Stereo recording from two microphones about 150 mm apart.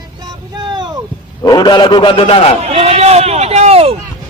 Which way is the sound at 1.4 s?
30° left (ahead or behind).